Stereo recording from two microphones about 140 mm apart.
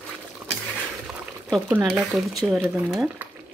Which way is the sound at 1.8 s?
Centre (ahead or behind).